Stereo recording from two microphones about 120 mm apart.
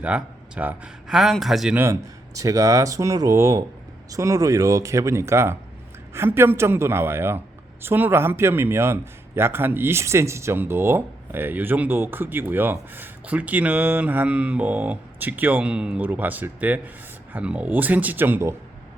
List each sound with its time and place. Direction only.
0.0 s a man's voice: 10° right (ahead or behind)
1.1 s speech: centre (ahead or behind)
1.7 s speech: 20° right (ahead or behind)